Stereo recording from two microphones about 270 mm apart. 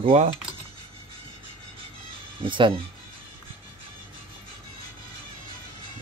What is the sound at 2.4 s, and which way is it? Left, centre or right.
Speech, centre.